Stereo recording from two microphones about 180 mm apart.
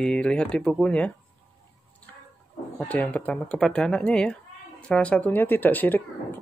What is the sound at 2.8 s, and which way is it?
Speech, 10° left (ahead or behind).